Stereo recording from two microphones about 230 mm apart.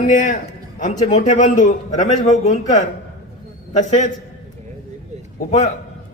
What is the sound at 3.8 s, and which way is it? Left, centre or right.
Speech, left.